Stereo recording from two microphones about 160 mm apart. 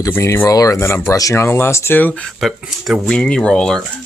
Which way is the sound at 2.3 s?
Centre (ahead or behind).